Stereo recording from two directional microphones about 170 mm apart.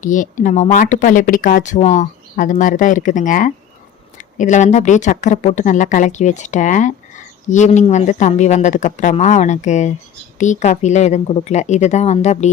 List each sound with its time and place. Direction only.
0.0 s speech: 50° left (ahead or behind)